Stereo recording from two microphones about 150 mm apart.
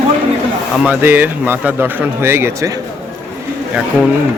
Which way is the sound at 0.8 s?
10° right (ahead or behind).